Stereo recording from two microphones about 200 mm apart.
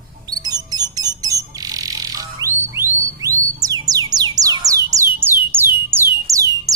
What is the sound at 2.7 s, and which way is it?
Music, 15° right (ahead or behind).